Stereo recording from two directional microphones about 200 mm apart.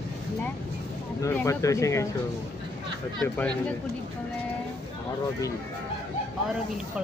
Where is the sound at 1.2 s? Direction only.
15° left (ahead or behind).